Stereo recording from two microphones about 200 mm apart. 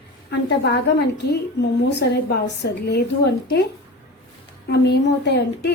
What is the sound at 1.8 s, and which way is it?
A woman's voice, 55° left (ahead or behind).